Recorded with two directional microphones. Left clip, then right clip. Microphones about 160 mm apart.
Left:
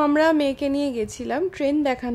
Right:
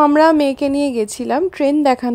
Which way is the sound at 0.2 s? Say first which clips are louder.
Right 7 dB; 35° right (ahead or behind).